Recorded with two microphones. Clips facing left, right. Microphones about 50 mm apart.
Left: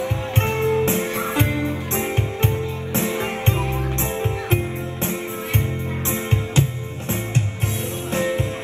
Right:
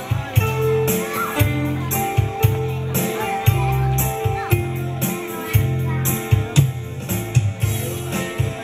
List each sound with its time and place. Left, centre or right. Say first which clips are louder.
0.4 s music: right 1 dB; left
3.6 s music: right 3 dB; right
6.0 s music: right 1 dB; left